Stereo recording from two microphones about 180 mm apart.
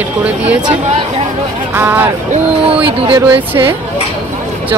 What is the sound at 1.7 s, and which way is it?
Speech, 10° right (ahead or behind).